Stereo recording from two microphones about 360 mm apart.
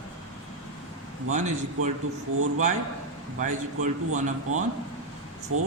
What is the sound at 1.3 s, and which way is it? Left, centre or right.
Speech, centre.